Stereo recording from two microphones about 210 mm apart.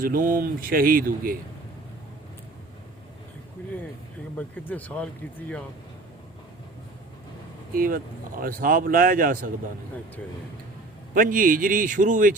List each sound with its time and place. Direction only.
0.0 s a man's voice: 40° right (ahead or behind)
4.4 s speech: 5° left (ahead or behind)
7.7 s a man's voice: 40° right (ahead or behind)
11.1 s a man's voice: 40° right (ahead or behind)